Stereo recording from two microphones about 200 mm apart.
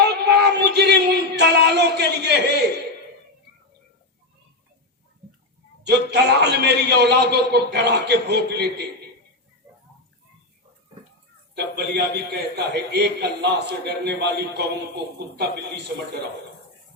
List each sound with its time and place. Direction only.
0.0 s a sound: 55° right (ahead or behind)
5.8 s a man's voice: 55° right (ahead or behind)
11.5 s a man's voice: 55° right (ahead or behind)